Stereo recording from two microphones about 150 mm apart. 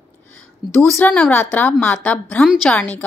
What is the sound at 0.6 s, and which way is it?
Speech, centre (ahead or behind).